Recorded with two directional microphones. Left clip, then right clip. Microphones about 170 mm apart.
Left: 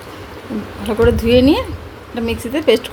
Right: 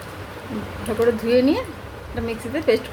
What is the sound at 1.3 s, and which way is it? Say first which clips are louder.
A woman's voice: left 6 dB; 45° left (ahead or behind).